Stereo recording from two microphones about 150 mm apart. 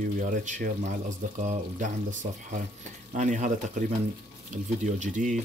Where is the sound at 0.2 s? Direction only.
60° right (ahead or behind).